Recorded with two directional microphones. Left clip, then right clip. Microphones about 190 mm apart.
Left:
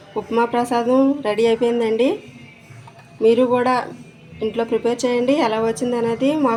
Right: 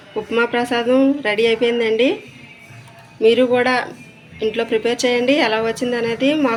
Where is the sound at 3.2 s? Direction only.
30° left (ahead or behind).